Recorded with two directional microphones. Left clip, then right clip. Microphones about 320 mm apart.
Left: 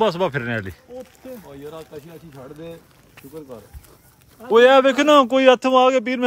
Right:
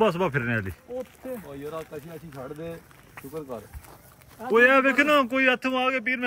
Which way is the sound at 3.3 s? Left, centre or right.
Centre.